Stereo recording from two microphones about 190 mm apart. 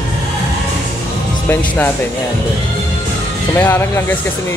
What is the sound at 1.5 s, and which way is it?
Speech, 10° left (ahead or behind).